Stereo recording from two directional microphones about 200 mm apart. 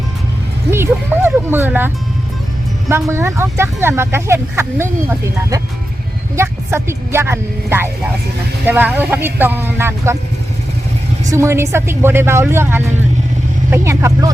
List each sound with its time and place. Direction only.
0.7 s speech: 10° right (ahead or behind)
3.1 s speech: 15° right (ahead or behind)
11.3 s speech: 15° right (ahead or behind)